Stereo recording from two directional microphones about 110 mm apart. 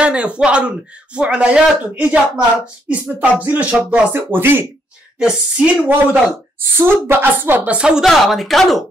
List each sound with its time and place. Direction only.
0.0 s speech: 10° right (ahead or behind)
5.2 s speech: 10° right (ahead or behind)
6.8 s speech: 20° right (ahead or behind); by 8.7 s centre (ahead or behind)